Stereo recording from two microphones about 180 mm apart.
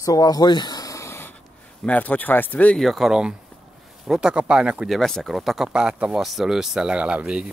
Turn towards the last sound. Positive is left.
turn(degrees=-5)  # may be behind; listen again after turning